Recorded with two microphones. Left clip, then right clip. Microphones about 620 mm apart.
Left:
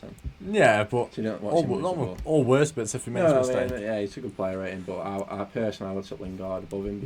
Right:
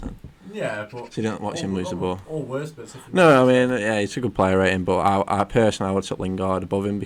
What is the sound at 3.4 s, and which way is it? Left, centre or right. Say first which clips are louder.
Speech: right 7 dB; right.